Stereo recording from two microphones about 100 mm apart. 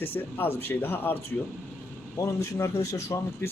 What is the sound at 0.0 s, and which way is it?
Speech, 20° left (ahead or behind).